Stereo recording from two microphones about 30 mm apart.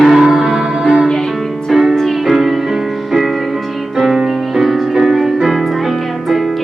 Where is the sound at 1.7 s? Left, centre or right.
Centre.